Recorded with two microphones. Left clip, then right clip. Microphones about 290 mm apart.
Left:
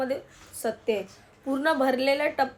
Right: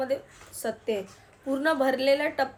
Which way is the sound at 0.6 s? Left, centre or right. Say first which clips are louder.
Left 2 dB; centre.